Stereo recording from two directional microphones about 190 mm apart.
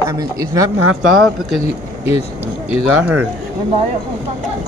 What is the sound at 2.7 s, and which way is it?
Speech, 5° right (ahead or behind).